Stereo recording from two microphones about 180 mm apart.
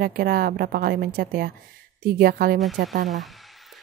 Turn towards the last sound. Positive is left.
turn(degrees=-45)  # may be behind; listen again after turning